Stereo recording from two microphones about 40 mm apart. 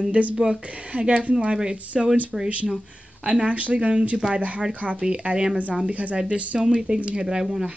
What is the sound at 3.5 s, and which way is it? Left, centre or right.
Speech, right.